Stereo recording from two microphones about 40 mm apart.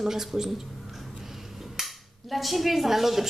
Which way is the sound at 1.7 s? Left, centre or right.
Centre.